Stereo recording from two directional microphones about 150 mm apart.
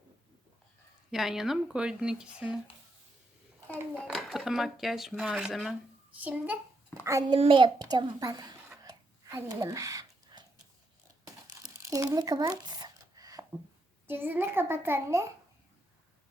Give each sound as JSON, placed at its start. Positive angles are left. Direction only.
{"t": 1.1, "sound": "speech", "side_deg": 0}
{"t": 4.0, "sound": "a child's voice", "side_deg": 0}
{"t": 7.0, "sound": "a child's voice", "side_deg": -20}
{"t": 7.3, "sound": "a child's voice", "side_deg": -35}
{"t": 8.8, "sound": "a sound", "side_deg": -25}
{"t": 11.3, "sound": "crumpling", "side_deg": -20}
{"t": 14.1, "sound": "a child's voice", "side_deg": -15}